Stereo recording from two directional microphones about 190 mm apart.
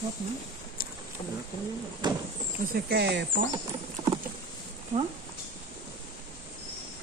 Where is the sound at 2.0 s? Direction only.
20° right (ahead or behind).